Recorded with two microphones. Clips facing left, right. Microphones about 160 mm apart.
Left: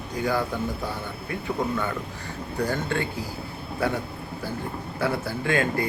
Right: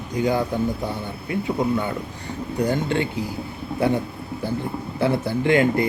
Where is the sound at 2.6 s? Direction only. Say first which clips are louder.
Right 4 dB; 20° right (ahead or behind).